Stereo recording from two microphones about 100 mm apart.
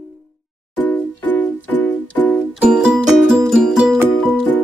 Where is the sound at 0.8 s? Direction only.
20° left (ahead or behind).